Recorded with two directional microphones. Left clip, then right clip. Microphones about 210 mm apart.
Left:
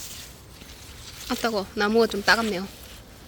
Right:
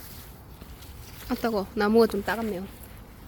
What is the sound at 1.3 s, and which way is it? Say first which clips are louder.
Speech: left 2 dB; 10° right (ahead or behind).